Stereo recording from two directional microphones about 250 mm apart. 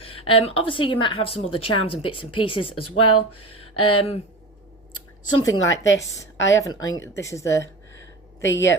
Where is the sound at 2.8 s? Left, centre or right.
Left.